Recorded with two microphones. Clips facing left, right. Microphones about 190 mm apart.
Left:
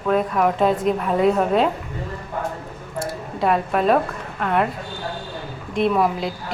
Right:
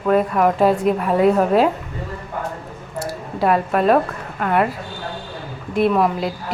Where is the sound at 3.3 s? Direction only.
Centre (ahead or behind).